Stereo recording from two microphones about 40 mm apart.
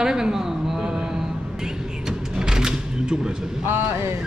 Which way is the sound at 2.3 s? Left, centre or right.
Centre.